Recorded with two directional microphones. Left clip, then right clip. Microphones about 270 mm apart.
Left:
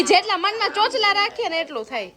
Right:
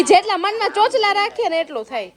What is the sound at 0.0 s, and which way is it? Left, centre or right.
A woman's voice, centre.